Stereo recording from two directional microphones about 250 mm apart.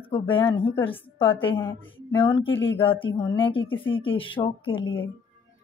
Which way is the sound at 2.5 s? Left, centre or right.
Left.